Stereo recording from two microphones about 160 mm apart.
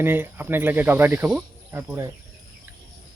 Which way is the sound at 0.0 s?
15° right (ahead or behind).